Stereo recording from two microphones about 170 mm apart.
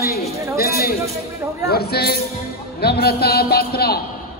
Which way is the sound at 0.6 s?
65° left (ahead or behind).